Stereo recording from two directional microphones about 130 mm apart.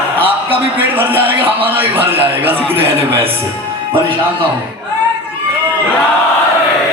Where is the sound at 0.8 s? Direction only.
15° right (ahead or behind).